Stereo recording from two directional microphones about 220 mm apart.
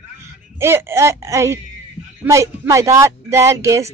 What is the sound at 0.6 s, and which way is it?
Speech, 10° right (ahead or behind).